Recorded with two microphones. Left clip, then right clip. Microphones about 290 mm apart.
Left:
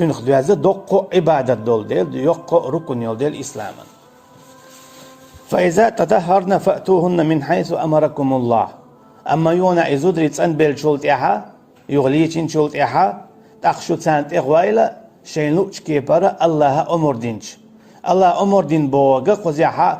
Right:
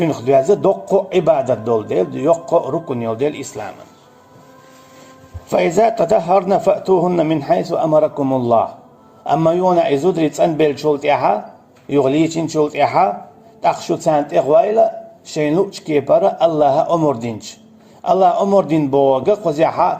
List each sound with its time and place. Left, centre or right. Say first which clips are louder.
0.0 s a man's voice: right 2 dB; left
5.5 s a man's voice: even; left